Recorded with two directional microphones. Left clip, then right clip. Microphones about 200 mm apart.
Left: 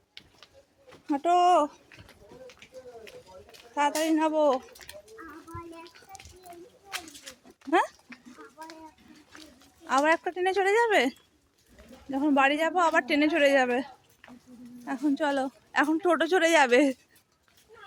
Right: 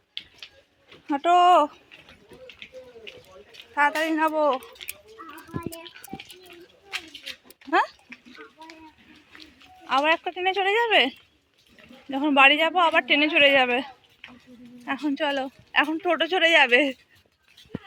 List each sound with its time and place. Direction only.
1.1 s speech: 5° left (ahead or behind)
3.8 s speech: 25° left (ahead or behind)
7.3 s a sound: 25° left (ahead or behind)
9.4 s speech: 30° left (ahead or behind)
12.1 s speech: 5° left (ahead or behind)
14.8 s speech: 15° left (ahead or behind)
15.1 s speech: 25° left (ahead or behind)